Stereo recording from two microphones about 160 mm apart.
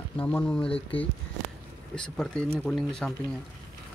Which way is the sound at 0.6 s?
35° left (ahead or behind).